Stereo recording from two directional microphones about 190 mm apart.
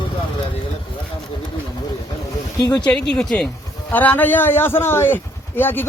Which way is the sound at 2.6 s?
20° left (ahead or behind).